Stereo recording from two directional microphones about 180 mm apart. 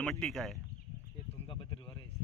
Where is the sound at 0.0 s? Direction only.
5° left (ahead or behind).